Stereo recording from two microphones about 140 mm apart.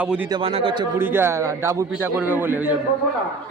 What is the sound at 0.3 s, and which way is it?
Speech, 40° right (ahead or behind).